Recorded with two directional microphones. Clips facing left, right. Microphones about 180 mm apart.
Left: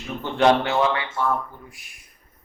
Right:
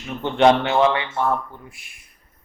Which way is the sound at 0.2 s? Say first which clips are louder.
Right 3 dB; 20° right (ahead or behind).